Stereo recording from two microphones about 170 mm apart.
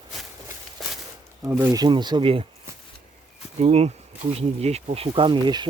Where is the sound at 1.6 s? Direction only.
20° right (ahead or behind).